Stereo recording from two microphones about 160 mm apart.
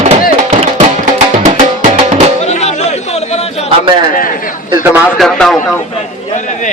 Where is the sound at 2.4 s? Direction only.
45° left (ahead or behind).